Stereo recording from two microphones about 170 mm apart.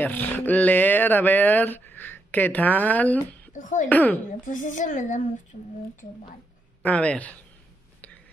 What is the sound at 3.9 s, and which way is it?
Speech, 10° left (ahead or behind).